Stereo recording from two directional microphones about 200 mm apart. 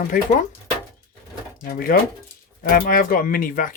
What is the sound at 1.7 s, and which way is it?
Speech, 45° left (ahead or behind).